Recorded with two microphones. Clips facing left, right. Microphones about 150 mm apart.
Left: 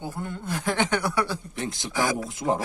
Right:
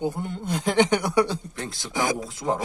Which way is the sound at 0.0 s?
20° right (ahead or behind).